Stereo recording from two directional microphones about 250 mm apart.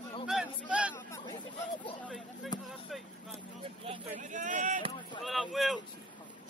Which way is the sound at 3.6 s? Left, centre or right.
Right.